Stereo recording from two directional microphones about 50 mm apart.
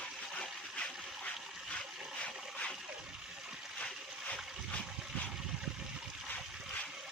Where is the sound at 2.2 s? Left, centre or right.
Left.